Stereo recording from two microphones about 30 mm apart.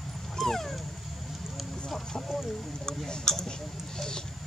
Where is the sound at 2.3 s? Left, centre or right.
Centre.